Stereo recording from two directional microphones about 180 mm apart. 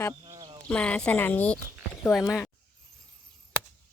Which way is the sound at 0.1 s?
20° right (ahead or behind).